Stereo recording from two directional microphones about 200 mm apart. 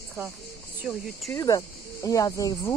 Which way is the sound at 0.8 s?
Centre (ahead or behind).